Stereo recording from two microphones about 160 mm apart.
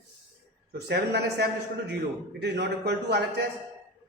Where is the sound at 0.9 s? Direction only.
90° right.